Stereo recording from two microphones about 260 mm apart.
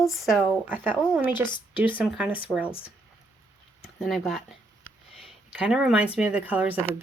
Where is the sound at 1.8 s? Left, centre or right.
Centre.